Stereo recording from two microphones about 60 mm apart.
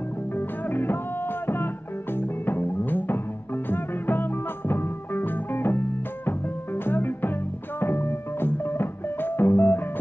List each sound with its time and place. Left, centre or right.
0.4 s music: left